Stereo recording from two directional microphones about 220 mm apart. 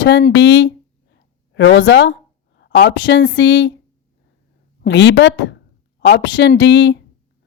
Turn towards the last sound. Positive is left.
turn(degrees=55)  # may be behind; listen again after turning